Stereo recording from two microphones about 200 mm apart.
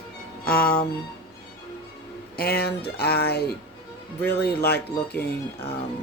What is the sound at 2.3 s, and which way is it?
Speech, 50° left (ahead or behind).